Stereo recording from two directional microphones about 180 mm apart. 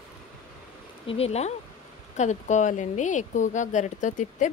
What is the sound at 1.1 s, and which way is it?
Speech, 35° left (ahead or behind).